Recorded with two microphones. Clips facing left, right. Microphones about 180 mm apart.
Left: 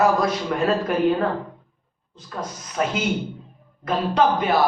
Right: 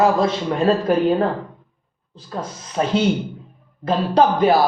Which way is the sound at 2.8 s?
30° right (ahead or behind).